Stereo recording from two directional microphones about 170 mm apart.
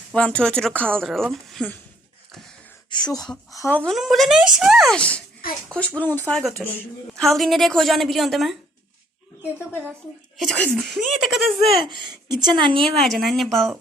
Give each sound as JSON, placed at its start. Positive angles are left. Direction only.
{"t": 0.1, "sound": "a woman's voice", "side_deg": 5}
{"t": 2.9, "sound": "speech", "side_deg": 25}
{"t": 3.2, "sound": "a woman's voice", "side_deg": 0}
{"t": 10.3, "sound": "a woman's voice", "side_deg": 0}
{"t": 11.8, "sound": "a woman's voice", "side_deg": -25}
{"t": 13.0, "sound": "a woman's voice", "side_deg": 0}